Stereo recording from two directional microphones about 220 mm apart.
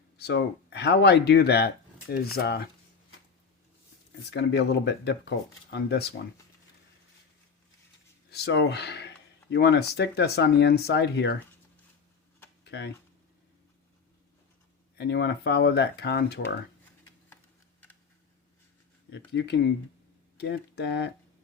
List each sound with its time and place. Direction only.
0.2 s speech: 50° left (ahead or behind)
4.3 s speech: 50° left (ahead or behind)
8.3 s speech: 50° left (ahead or behind)
12.6 s a sound: 50° left (ahead or behind)
14.9 s speech: 50° left (ahead or behind)
19.3 s speech: 50° left (ahead or behind)